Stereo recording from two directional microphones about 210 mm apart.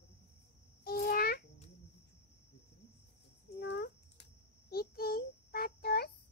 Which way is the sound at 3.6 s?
55° left (ahead or behind).